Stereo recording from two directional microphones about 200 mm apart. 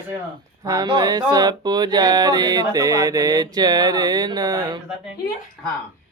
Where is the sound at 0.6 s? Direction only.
20° right (ahead or behind).